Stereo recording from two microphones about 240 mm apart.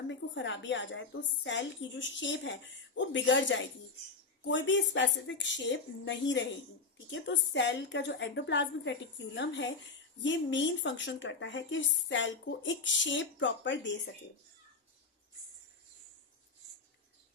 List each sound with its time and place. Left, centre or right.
0.1 s a woman's voice: left